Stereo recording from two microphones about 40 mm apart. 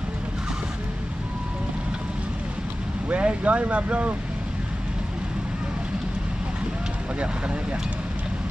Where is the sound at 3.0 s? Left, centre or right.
Right.